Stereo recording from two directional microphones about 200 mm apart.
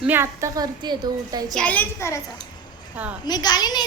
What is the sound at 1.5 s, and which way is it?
Speech, 5° left (ahead or behind).